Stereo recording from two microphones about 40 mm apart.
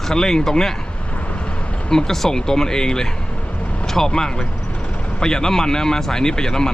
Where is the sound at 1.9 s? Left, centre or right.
Centre.